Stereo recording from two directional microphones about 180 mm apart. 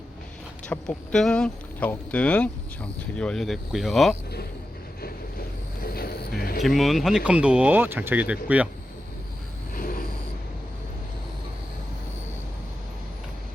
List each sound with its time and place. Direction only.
0.7 s speech: 5° left (ahead or behind)
5.8 s vehicle: 55° left (ahead or behind)
6.6 s speech: centre (ahead or behind)
9.7 s vehicle: 55° left (ahead or behind)